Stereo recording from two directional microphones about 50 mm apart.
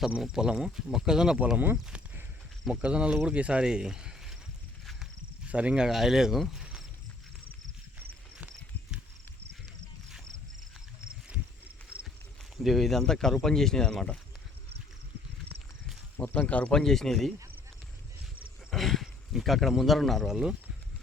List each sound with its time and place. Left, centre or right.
0.3 s speech: centre
1.5 s speech: right; by 4.4 s centre
5.5 s speech: right; by 6.4 s centre
12.6 s speech: centre
16.2 s speech: left
16.7 s speech: centre
18.7 s speech: centre